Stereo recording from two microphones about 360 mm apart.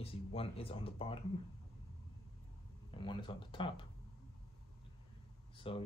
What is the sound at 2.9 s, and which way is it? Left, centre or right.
Speech, centre.